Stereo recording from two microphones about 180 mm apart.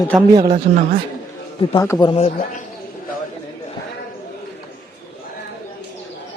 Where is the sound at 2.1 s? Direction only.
35° left (ahead or behind).